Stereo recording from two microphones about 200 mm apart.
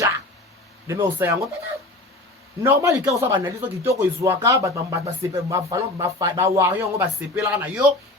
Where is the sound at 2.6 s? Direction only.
10° right (ahead or behind).